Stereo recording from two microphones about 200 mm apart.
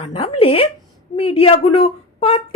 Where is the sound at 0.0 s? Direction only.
30° left (ahead or behind).